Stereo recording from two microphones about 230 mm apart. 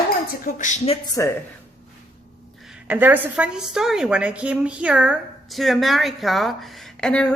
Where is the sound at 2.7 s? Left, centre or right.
Centre.